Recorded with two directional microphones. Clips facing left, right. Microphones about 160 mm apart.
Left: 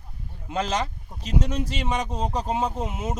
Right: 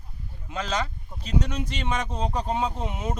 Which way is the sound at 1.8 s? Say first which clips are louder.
Right 1 dB; 5° left (ahead or behind).